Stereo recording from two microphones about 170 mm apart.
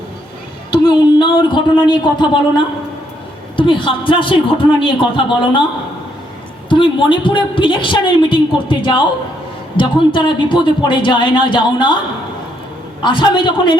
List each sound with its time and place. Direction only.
0.7 s a woman's voice: 25° left (ahead or behind)
3.6 s a woman's voice: 30° left (ahead or behind)
6.7 s a woman's voice: 30° left (ahead or behind)
13.0 s a woman's voice: 30° left (ahead or behind)